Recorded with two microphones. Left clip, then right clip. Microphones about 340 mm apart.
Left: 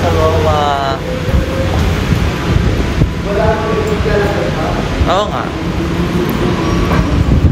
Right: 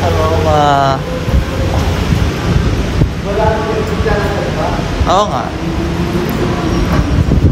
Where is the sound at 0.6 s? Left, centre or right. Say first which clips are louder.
Right 4 dB; right.